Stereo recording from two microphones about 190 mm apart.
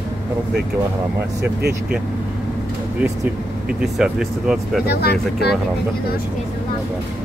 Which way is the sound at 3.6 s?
5° right (ahead or behind).